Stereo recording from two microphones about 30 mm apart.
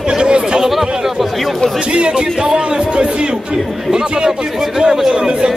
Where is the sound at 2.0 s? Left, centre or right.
Right.